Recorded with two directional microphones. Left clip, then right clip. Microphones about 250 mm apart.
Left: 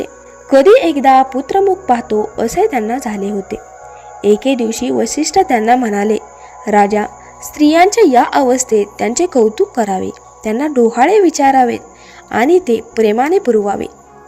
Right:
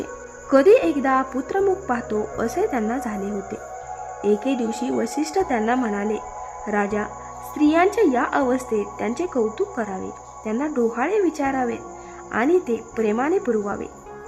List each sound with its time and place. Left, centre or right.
0.5 s speech: centre